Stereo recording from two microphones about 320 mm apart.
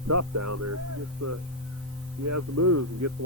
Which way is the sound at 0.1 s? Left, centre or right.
Right.